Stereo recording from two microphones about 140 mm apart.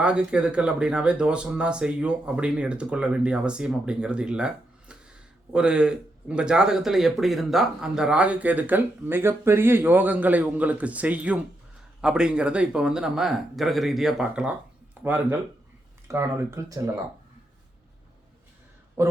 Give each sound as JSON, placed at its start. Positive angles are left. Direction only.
{"t": 0.0, "sound": "speech", "side_deg": -5}
{"t": 19.0, "sound": "speech", "side_deg": -20}